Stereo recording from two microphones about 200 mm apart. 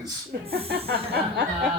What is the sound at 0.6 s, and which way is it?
Chuckle, 50° right (ahead or behind).